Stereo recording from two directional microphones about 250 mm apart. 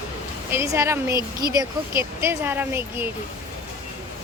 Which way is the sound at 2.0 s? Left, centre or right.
Centre.